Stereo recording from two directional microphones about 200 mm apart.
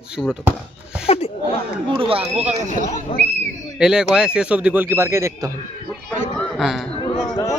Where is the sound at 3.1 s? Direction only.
25° left (ahead or behind).